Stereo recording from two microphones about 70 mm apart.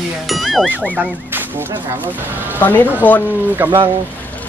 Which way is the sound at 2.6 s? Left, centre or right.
Left.